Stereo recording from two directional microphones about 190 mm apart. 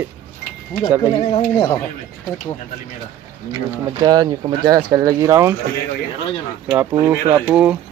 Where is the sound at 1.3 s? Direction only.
25° left (ahead or behind).